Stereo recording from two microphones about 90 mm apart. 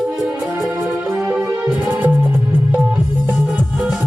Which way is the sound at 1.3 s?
20° right (ahead or behind).